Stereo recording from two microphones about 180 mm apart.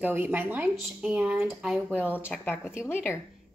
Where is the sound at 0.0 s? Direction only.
10° right (ahead or behind).